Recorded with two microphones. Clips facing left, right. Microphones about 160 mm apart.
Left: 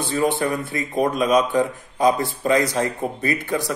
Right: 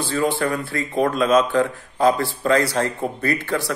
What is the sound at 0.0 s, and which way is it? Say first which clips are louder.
A man's voice: even; 20° left (ahead or behind).